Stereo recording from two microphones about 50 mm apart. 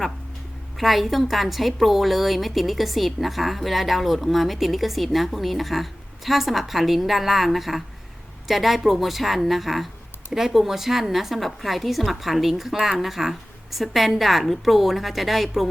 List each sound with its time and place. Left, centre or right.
0.8 s a woman's voice: centre